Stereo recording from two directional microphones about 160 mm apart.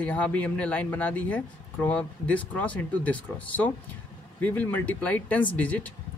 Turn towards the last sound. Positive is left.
turn(degrees=10)  # may be behind; listen again after turning